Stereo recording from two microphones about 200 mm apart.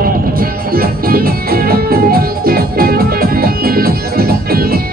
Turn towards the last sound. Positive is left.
turn(degrees=-50)  # may be behind; listen again after turning